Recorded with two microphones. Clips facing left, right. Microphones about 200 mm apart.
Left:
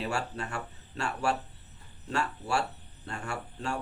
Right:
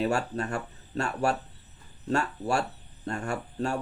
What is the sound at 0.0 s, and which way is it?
Speech, 40° right (ahead or behind).